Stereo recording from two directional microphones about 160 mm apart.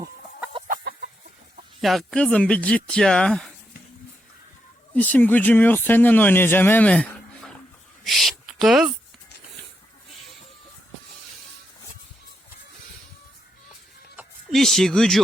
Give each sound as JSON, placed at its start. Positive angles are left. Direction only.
{"t": 1.8, "sound": "speech", "side_deg": 0}
{"t": 4.9, "sound": "speech", "side_deg": 10}
{"t": 14.5, "sound": "speech", "side_deg": 0}